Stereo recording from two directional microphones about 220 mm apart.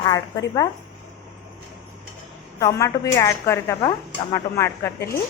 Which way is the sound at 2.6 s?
15° left (ahead or behind).